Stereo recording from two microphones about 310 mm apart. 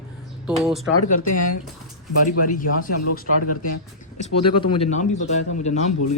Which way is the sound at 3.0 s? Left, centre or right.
Left.